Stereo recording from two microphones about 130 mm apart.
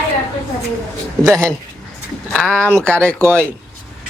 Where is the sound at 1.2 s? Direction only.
Centre (ahead or behind).